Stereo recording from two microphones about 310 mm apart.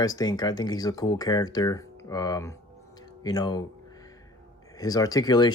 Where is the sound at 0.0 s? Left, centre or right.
Centre.